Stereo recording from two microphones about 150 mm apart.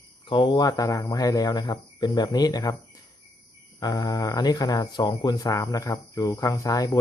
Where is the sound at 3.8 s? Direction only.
25° left (ahead or behind).